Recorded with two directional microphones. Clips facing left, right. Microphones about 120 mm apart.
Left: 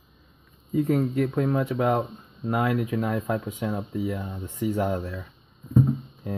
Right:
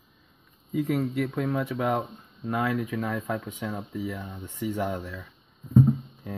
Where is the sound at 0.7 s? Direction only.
35° left (ahead or behind).